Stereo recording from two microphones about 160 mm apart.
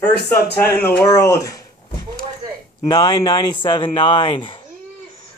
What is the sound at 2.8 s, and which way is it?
Speech, 25° left (ahead or behind).